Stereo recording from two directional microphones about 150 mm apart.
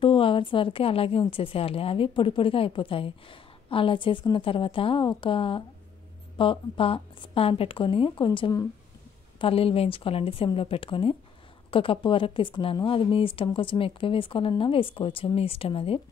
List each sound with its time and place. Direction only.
0.0 s a woman's voice: 35° left (ahead or behind)